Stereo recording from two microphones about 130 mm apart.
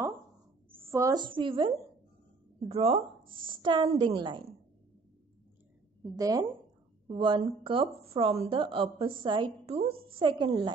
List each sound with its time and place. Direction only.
0.7 s a sound: 20° right (ahead or behind)
1.1 s a woman's voice: 40° right (ahead or behind)
2.7 s a woman's voice: 50° right (ahead or behind)
3.4 s a woman's voice: 40° right (ahead or behind)
6.1 s a woman's voice: 25° right (ahead or behind)
7.1 s a woman's voice: 40° right (ahead or behind)